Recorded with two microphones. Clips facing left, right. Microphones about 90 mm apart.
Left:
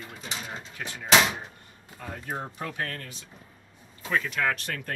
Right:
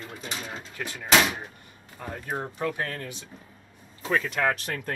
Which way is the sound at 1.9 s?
15° right (ahead or behind).